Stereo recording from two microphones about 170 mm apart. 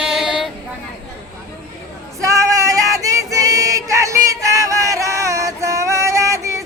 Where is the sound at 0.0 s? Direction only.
5° right (ahead or behind).